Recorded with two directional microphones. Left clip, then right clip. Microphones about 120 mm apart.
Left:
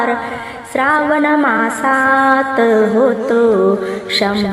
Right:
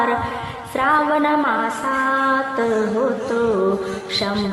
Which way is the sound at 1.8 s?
40° left (ahead or behind).